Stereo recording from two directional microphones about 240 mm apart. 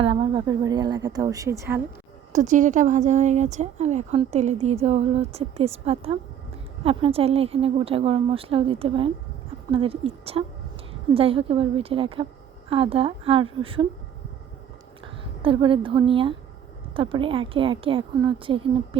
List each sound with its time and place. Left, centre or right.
0.0 s a woman's voice: right
2.3 s speech: right
15.4 s speech: right